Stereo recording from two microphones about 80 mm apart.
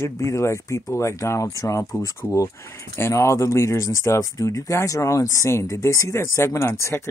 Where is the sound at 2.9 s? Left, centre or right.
Left.